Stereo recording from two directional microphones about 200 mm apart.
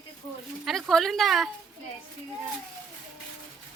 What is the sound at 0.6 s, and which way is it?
Speech, centre (ahead or behind).